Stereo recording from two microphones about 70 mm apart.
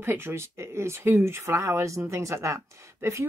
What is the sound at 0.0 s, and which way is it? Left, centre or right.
Speech, right.